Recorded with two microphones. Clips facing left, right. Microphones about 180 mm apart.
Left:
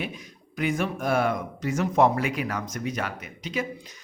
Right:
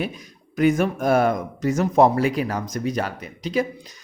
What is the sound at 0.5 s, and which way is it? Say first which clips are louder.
Speech: right 8 dB; 45° right (ahead or behind).